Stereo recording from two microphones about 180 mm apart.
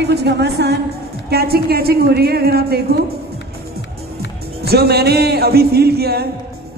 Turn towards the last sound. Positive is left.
turn(degrees=-60)  # may be behind; listen again after turning